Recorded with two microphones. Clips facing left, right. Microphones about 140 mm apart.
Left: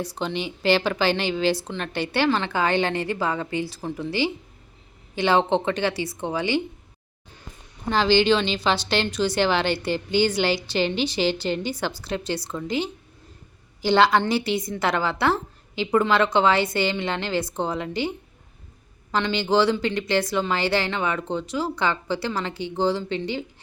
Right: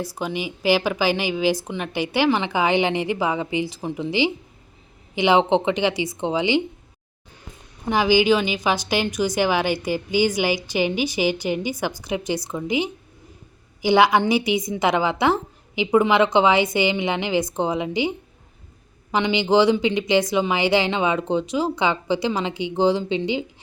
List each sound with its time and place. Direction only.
0.0 s a woman's voice: 10° right (ahead or behind)
7.9 s a woman's voice: 10° right (ahead or behind)
19.1 s a woman's voice: 15° right (ahead or behind)